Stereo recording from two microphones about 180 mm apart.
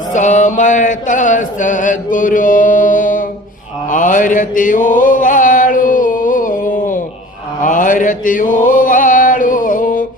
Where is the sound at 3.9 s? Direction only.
45° left (ahead or behind).